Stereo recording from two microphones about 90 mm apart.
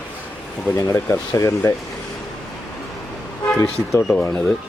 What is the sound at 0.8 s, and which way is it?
Speech, 30° left (ahead or behind).